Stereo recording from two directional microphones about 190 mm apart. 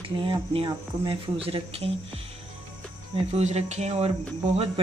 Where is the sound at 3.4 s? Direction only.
35° right (ahead or behind).